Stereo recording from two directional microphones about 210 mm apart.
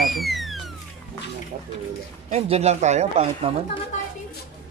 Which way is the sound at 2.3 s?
30° right (ahead or behind).